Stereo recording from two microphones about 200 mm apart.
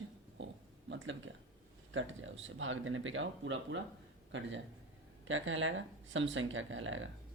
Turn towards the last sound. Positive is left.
turn(degrees=-75)  # may be behind; listen again after turning